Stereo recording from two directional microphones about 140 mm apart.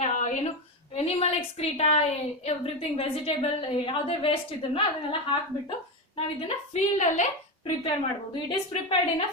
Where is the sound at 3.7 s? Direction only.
40° left (ahead or behind).